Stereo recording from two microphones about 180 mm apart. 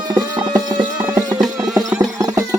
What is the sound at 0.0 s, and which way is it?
Clip-clop, 20° right (ahead or behind).